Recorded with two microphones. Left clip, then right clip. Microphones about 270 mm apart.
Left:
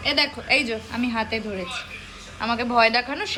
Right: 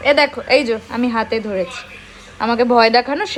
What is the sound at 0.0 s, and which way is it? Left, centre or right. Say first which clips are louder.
A woman's voice: right 9 dB; centre.